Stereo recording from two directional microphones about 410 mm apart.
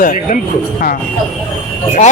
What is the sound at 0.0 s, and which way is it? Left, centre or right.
Speech, centre.